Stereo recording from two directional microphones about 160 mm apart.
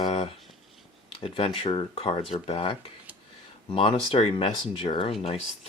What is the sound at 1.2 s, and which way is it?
Speech, 35° left (ahead or behind).